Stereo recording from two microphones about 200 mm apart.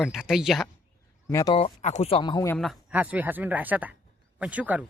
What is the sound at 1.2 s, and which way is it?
Speech, 15° left (ahead or behind).